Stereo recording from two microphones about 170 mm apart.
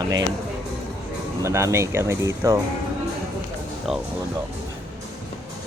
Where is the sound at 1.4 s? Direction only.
15° right (ahead or behind).